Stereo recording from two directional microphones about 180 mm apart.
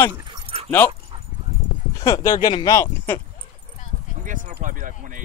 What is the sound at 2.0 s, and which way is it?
Speech, 20° left (ahead or behind).